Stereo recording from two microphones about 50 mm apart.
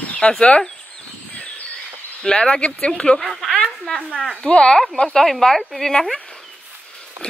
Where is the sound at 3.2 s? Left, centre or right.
Centre.